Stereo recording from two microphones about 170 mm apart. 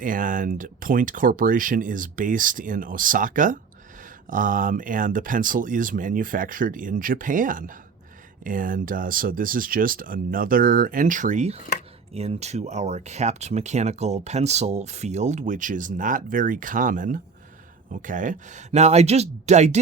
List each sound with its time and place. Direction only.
0.0 s speech: 50° right (ahead or behind)